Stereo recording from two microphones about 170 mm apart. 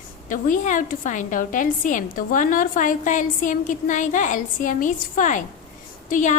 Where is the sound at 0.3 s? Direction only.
50° left (ahead or behind).